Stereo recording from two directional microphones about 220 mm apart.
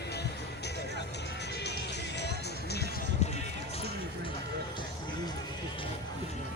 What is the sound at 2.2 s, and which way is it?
Music, 50° left (ahead or behind).